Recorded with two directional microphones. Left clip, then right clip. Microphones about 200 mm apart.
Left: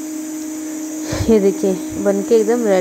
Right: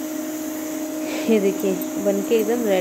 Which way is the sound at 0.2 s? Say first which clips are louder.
Left 2 dB; 40° right (ahead or behind).